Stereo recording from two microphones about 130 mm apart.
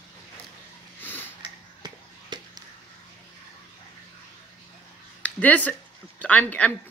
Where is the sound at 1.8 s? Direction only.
35° right (ahead or behind).